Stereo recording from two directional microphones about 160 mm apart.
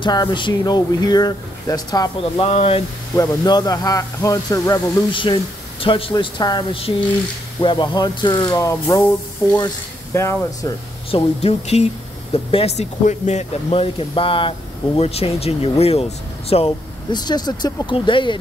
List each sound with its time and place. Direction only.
0.0 s speech: 25° left (ahead or behind)
2.4 s speech: 40° left (ahead or behind)
3.2 s speech: 25° left (ahead or behind)
10.1 s speech: 15° left (ahead or behind)
11.1 s speech: 35° left (ahead or behind)